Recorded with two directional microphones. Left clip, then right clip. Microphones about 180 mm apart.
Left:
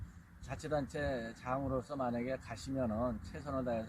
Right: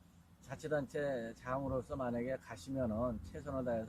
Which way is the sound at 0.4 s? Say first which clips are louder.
Left 1 dB; 25° right (ahead or behind).